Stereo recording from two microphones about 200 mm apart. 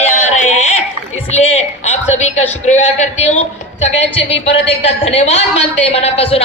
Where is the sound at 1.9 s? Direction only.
35° left (ahead or behind).